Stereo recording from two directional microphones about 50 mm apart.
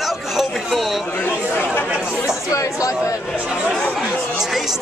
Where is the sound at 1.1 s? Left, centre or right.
Left.